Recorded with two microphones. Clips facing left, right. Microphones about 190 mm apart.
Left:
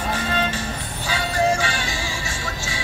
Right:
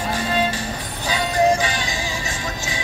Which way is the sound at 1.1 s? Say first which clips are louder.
Right 3 dB; 15° right (ahead or behind).